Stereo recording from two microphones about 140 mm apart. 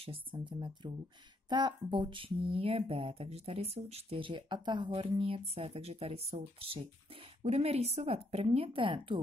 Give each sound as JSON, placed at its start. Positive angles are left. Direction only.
{"t": 0.0, "sound": "speech", "side_deg": -40}